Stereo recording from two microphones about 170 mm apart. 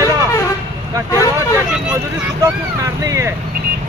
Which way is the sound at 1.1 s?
15° left (ahead or behind).